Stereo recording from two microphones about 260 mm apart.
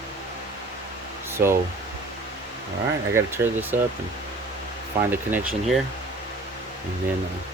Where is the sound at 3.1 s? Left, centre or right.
Centre.